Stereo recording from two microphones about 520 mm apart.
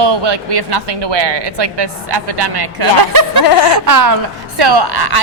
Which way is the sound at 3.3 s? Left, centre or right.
Left.